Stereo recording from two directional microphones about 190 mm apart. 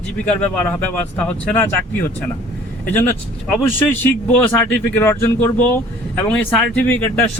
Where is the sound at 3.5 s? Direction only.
10° left (ahead or behind).